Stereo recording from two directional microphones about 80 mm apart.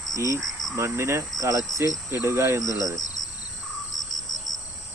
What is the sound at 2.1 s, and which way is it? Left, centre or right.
Speech, right.